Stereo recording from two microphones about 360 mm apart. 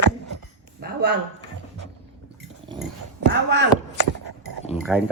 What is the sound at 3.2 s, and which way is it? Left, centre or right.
Speech, right.